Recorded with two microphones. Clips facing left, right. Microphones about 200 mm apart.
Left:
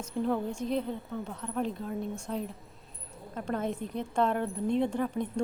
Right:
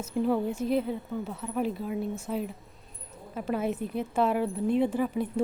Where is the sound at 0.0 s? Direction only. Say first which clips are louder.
Right 3 dB; 5° right (ahead or behind).